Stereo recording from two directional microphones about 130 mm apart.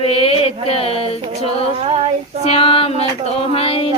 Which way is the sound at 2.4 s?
45° left (ahead or behind).